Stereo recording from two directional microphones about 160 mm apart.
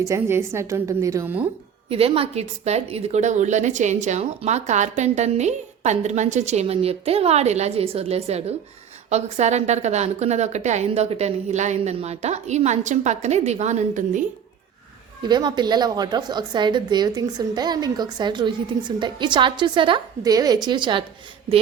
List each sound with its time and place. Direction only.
0.0 s a woman's voice: 15° right (ahead or behind)
1.9 s a woman's voice: 35° right (ahead or behind); by 14.3 s 55° right (ahead or behind)
15.2 s a woman's voice: 25° right (ahead or behind)